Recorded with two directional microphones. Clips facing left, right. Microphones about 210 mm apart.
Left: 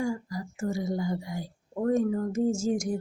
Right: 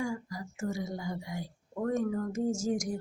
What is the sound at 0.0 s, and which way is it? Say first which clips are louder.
A woman's voice: left 4 dB; 35° left (ahead or behind).